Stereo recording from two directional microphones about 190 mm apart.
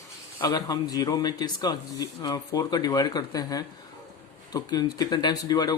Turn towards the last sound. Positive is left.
turn(degrees=20)  # may be behind; listen again after turning